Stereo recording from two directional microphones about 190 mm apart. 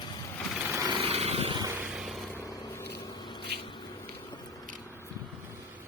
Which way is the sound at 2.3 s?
15° left (ahead or behind).